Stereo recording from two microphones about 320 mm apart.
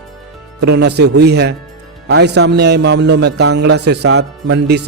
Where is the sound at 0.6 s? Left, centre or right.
Right.